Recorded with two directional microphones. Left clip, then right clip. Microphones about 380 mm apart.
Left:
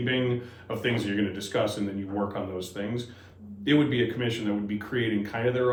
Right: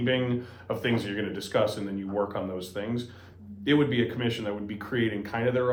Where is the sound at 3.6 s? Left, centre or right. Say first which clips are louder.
Left 1 dB; centre.